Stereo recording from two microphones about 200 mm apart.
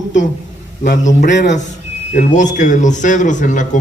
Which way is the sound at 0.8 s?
40° left (ahead or behind).